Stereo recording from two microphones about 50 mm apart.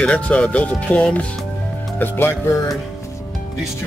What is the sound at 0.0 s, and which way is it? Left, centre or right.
Speech, left.